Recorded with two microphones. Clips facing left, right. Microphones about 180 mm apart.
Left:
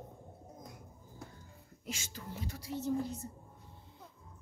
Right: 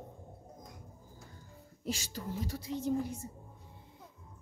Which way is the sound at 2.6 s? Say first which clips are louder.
Right 1 dB; 15° right (ahead or behind).